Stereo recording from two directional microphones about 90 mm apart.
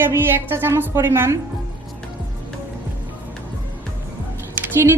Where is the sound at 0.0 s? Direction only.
25° right (ahead or behind).